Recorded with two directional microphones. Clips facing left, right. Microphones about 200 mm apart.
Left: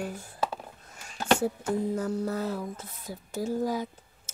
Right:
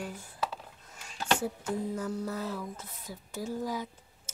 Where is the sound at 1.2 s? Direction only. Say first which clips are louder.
Left 5 dB; 45° left (ahead or behind).